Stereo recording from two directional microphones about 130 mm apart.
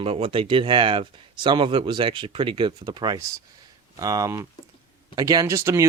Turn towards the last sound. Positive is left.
turn(degrees=-20)  # may be behind; listen again after turning